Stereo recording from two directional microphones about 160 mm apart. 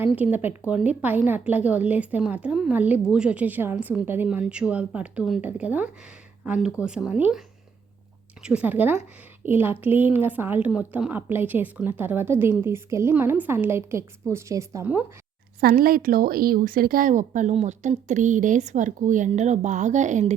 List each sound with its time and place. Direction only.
0.0 s a woman's voice: 10° right (ahead or behind)
15.6 s speech: 65° right (ahead or behind); by 20.3 s 50° right (ahead or behind)